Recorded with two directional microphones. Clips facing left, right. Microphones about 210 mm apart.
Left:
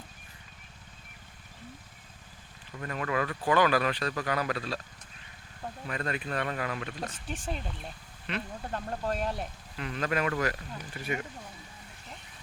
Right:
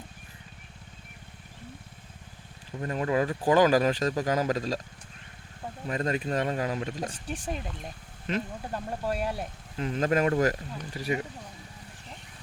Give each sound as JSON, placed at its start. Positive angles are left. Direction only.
{"t": 2.7, "sound": "speech", "side_deg": -30}
{"t": 5.9, "sound": "speech", "side_deg": -35}
{"t": 7.3, "sound": "speech", "side_deg": -15}
{"t": 9.7, "sound": "speech", "side_deg": -40}